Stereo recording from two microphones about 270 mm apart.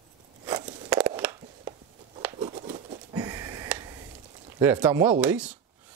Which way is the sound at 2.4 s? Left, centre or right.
Right.